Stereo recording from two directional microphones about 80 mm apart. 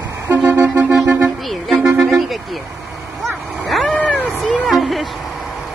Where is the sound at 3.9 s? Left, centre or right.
Centre.